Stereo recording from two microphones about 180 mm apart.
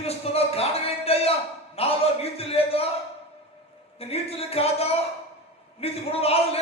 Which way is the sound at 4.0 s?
35° left (ahead or behind).